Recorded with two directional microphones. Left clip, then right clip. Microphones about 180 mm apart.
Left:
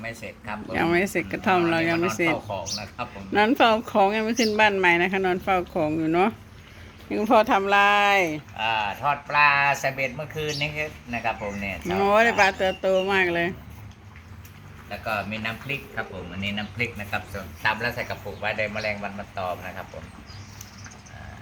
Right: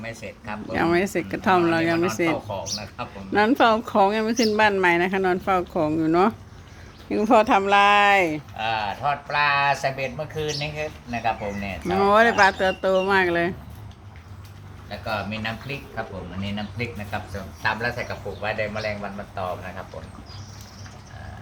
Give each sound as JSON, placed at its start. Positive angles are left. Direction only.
{"t": 0.0, "sound": "speech", "side_deg": 0}
{"t": 14.8, "sound": "speech", "side_deg": -5}